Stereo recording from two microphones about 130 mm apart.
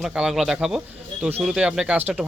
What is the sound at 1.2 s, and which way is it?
Speech, 15° right (ahead or behind).